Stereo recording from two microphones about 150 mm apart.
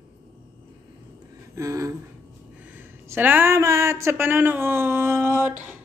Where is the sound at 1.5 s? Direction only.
20° right (ahead or behind).